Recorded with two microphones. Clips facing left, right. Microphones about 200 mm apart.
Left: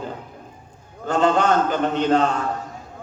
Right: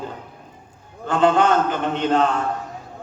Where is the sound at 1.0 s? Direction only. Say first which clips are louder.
Right 1 dB; 45° left (ahead or behind).